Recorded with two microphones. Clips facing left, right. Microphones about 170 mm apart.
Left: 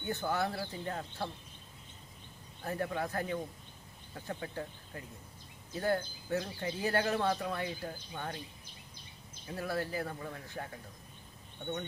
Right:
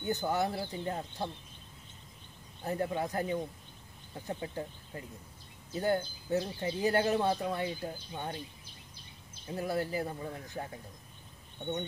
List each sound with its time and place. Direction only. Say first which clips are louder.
0.1 s speech: right 2 dB; 15° right (ahead or behind)
2.6 s speech: right 2 dB; 20° right (ahead or behind)
9.5 s speech: right 3 dB; 15° right (ahead or behind)